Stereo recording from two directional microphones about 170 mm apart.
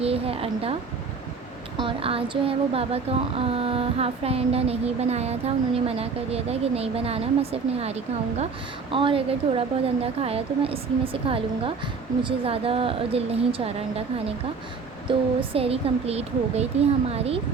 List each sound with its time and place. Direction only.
0.0 s a woman's voice: 35° right (ahead or behind)
1.8 s speech: 30° right (ahead or behind)
15.4 s speech: 35° right (ahead or behind)